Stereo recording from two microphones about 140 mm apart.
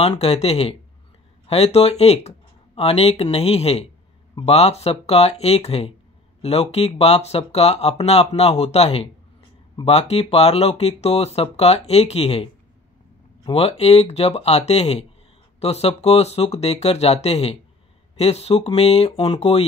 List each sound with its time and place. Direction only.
0.0 s speech: 45° left (ahead or behind)
13.5 s speech: 45° left (ahead or behind)